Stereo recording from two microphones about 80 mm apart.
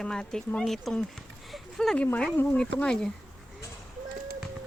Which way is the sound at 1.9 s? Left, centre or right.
Centre.